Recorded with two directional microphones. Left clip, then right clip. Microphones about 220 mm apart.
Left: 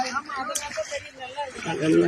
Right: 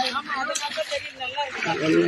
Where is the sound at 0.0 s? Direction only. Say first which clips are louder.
Right 2 dB; centre (ahead or behind).